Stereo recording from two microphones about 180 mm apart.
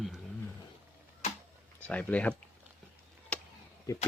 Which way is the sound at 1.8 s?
5° left (ahead or behind).